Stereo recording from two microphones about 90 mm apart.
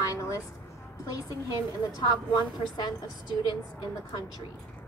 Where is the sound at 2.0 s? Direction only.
55° left (ahead or behind).